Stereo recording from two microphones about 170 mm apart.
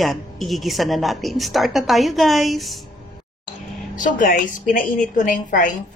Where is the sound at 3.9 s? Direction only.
50° left (ahead or behind).